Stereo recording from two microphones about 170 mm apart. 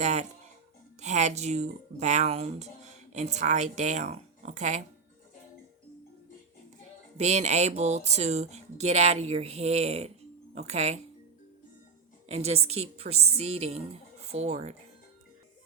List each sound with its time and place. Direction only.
0.0 s speech: 40° right (ahead or behind)
7.2 s speech: 40° right (ahead or behind)
12.3 s speech: 40° right (ahead or behind)